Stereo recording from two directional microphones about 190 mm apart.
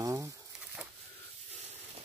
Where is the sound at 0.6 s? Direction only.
5° right (ahead or behind).